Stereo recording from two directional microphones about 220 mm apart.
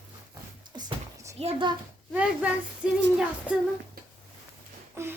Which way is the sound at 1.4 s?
25° right (ahead or behind).